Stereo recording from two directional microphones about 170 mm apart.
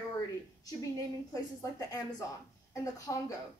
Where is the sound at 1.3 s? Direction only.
20° left (ahead or behind).